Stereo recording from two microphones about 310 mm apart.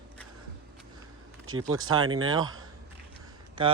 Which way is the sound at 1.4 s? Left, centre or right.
Right.